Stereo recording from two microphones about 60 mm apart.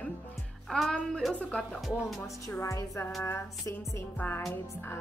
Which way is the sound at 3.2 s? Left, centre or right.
Left.